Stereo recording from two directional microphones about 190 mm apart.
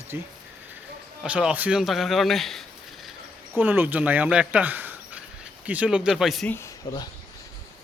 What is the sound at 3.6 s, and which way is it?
Speech, 10° right (ahead or behind).